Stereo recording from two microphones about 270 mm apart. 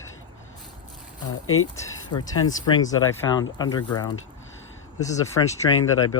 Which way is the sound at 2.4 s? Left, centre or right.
Centre.